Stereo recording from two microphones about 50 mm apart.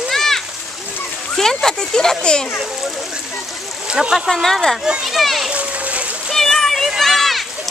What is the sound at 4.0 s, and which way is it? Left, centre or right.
Speech, centre.